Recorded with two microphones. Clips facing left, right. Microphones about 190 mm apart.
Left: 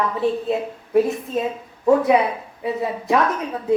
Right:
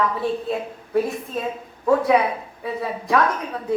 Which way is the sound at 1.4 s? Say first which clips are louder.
Left 4 dB; 20° left (ahead or behind).